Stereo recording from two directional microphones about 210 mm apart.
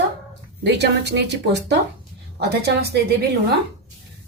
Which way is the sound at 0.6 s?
55° right (ahead or behind).